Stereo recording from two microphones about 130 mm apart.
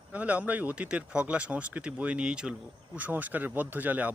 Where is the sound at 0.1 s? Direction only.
10° right (ahead or behind).